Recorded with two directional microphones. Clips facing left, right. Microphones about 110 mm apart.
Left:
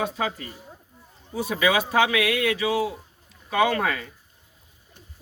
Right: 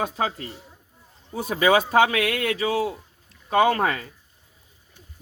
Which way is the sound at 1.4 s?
40° right (ahead or behind).